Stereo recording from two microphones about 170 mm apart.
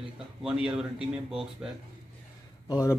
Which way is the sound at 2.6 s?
20° left (ahead or behind).